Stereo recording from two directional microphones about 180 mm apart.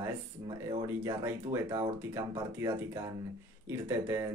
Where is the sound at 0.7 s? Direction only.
20° right (ahead or behind).